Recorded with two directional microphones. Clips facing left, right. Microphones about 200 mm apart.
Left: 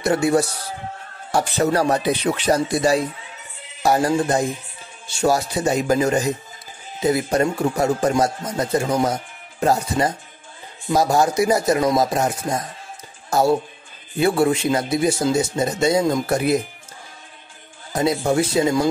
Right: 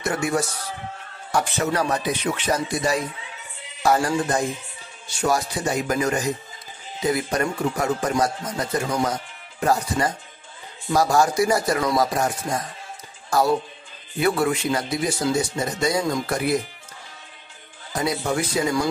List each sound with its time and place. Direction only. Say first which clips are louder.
0.0 s a man's voice: left 6 dB; 35° left (ahead or behind)
17.9 s speech: left 5 dB; 25° left (ahead or behind)